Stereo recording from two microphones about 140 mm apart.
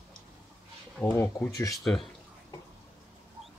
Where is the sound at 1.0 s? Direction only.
10° left (ahead or behind).